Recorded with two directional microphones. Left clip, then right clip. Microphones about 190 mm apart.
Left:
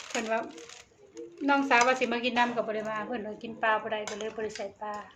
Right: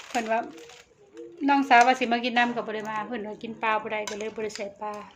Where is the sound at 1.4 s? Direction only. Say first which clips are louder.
Right 5 dB; 35° right (ahead or behind); by 4.9 s 55° right (ahead or behind).